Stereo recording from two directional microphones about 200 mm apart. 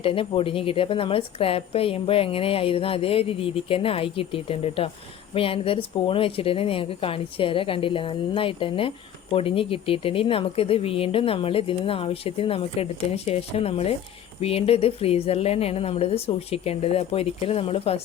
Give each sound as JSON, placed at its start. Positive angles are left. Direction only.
{"t": 0.0, "sound": "a woman's voice", "side_deg": 25}